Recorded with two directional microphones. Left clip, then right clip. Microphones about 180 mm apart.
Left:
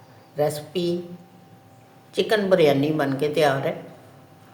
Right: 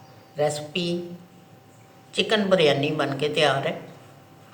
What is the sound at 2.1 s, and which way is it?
A woman's voice, 50° left (ahead or behind).